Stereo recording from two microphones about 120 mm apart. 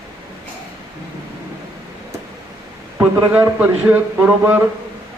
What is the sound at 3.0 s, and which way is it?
A man's voice, 15° right (ahead or behind).